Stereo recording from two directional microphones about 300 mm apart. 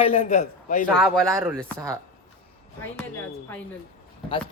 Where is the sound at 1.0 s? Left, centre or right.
Centre.